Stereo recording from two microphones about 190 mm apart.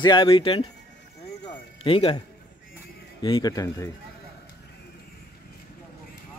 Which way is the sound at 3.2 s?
25° left (ahead or behind).